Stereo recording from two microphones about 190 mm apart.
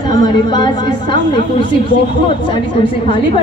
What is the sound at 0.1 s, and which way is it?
A woman's voice, 20° left (ahead or behind).